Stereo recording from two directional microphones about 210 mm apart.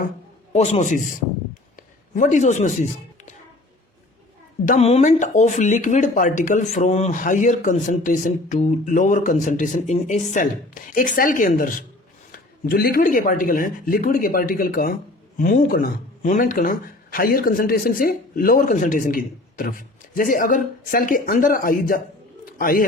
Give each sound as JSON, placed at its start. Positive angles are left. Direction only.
{"t": 0.5, "sound": "speech", "side_deg": 35}
{"t": 2.1, "sound": "speech", "side_deg": 35}
{"t": 4.6, "sound": "a man's voice", "side_deg": 35}